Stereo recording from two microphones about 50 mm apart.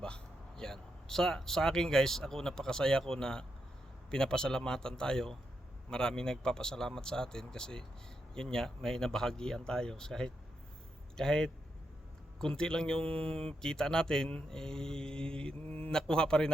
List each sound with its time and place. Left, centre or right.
0.0 s a man's voice: centre